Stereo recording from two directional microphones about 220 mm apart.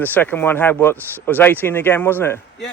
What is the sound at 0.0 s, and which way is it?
Speech, 10° left (ahead or behind).